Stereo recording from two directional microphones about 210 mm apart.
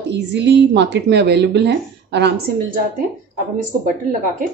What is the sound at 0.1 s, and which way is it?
A woman's voice, 55° right (ahead or behind).